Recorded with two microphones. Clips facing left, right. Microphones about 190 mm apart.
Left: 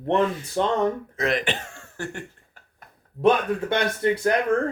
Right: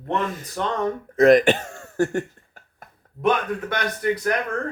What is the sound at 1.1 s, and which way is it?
Speech, 45° right (ahead or behind).